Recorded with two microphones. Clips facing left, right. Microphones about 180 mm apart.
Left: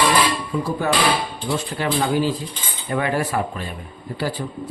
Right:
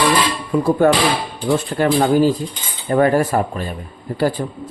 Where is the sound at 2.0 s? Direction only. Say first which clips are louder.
Right 5 dB; 40° right (ahead or behind).